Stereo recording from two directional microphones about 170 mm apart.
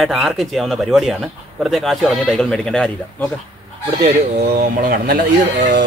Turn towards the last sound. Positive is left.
turn(degrees=-75)  # may be behind; listen again after turning